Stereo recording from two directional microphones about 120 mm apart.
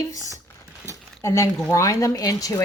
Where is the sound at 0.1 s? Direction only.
30° left (ahead or behind).